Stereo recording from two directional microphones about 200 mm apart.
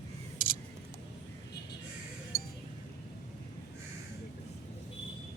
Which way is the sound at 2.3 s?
50° left (ahead or behind).